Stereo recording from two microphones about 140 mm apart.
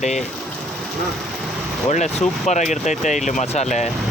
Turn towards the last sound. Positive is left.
turn(degrees=55)  # may be behind; listen again after turning